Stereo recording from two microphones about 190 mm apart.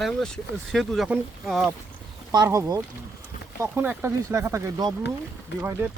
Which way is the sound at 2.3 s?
20° right (ahead or behind).